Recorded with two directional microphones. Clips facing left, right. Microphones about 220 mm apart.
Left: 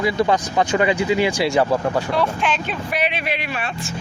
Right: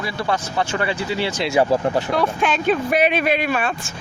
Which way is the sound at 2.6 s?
45° right (ahead or behind).